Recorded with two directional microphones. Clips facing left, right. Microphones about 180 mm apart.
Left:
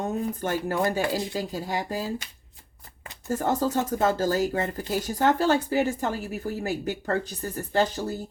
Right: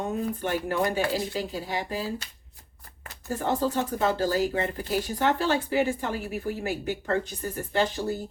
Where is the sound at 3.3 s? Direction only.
45° left (ahead or behind).